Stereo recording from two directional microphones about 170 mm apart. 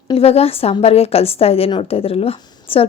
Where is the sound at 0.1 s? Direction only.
35° left (ahead or behind).